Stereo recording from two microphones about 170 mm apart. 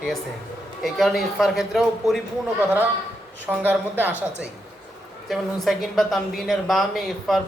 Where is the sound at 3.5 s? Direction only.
10° right (ahead or behind).